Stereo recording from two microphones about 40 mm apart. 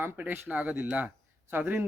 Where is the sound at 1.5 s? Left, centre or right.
Right.